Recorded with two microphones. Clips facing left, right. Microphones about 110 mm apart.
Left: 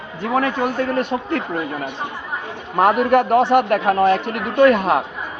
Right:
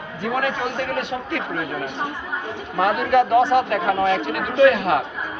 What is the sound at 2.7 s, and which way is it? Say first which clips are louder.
A man's voice: left 3 dB; 45° left (ahead or behind).